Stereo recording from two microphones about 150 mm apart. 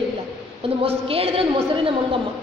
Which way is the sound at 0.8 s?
40° right (ahead or behind).